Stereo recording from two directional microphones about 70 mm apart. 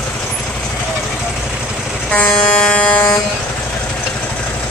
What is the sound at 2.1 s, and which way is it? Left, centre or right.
Air horn, left.